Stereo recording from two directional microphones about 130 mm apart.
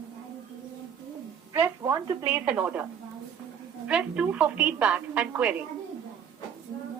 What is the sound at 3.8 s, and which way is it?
Speech, 10° right (ahead or behind).